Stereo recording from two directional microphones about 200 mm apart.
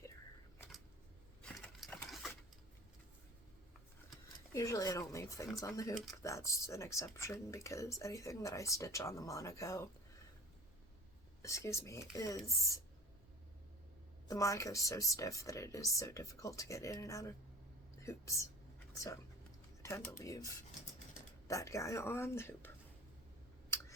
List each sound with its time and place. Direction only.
1.4 s a sound: 5° left (ahead or behind)
2.0 s sewing machine: centre (ahead or behind)
4.5 s speech: 15° left (ahead or behind)
11.4 s speech: 15° left (ahead or behind)
14.3 s speech: 15° left (ahead or behind)
19.8 s speech: 15° left (ahead or behind)